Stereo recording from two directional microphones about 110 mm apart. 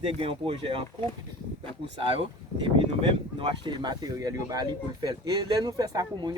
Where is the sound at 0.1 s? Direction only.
60° right (ahead or behind).